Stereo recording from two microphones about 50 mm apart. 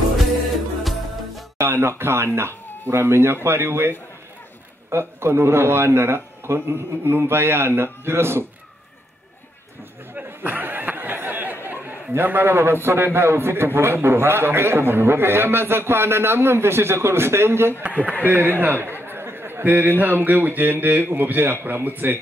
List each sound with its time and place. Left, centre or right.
1.6 s a man's voice: right
10.1 s chatter: right
11.6 s a sound: right
12.8 s a man's voice: right
17.8 s speech: right
18.2 s a man's voice: right